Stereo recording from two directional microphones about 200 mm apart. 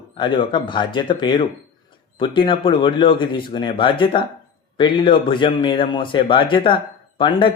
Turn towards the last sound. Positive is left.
turn(degrees=25)  # may be behind; listen again after turning